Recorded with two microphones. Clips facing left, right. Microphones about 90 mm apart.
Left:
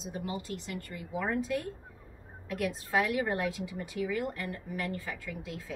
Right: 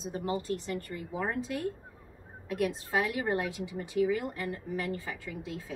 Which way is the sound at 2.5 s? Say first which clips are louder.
Right 1 dB; 25° right (ahead or behind).